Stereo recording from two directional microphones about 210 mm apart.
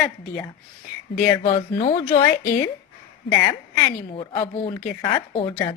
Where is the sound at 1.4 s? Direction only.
25° left (ahead or behind).